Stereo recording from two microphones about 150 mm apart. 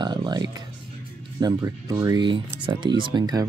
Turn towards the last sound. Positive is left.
turn(degrees=-30)  # may be behind; listen again after turning